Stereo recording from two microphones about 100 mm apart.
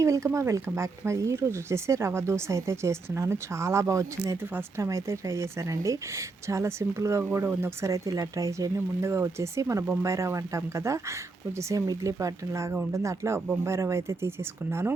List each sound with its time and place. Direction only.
0.0 s a woman's voice: 30° right (ahead or behind)